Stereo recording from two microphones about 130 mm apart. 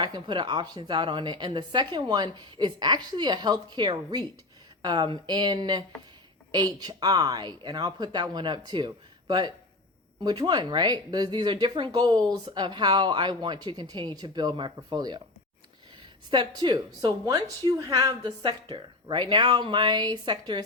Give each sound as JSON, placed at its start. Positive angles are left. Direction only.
{"t": 0.0, "sound": "speech", "side_deg": -35}
{"t": 16.3, "sound": "speech", "side_deg": -35}